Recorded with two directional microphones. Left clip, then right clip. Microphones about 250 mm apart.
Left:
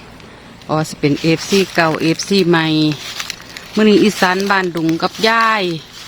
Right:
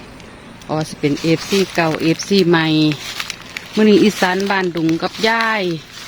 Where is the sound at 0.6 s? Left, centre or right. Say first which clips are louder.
Left 3 dB; centre.